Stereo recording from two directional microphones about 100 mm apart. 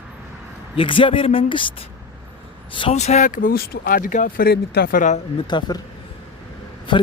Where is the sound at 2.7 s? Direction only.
75° left (ahead or behind); by 3.2 s 90° left.